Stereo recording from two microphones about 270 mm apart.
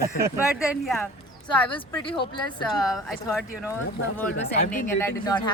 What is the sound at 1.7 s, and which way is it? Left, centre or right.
Speech, centre.